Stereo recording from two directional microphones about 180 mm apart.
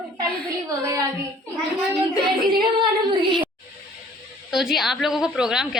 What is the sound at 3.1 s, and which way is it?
Speech, 25° right (ahead or behind).